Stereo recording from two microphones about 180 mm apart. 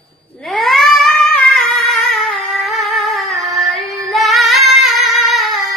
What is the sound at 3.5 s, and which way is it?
Female singing, centre (ahead or behind).